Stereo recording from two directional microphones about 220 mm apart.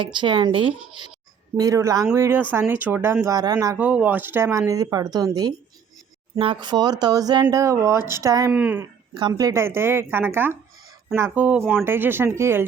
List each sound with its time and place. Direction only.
0.0 s speech: 20° right (ahead or behind)